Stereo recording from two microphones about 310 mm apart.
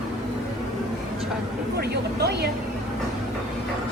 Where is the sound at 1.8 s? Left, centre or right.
Right.